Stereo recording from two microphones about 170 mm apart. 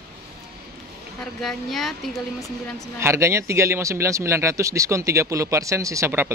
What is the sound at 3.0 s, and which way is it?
Speech, 15° right (ahead or behind).